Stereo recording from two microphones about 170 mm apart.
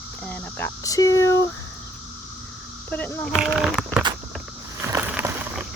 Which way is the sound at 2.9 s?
10° left (ahead or behind).